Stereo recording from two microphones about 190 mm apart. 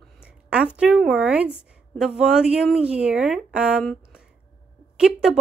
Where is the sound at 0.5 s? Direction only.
5° right (ahead or behind).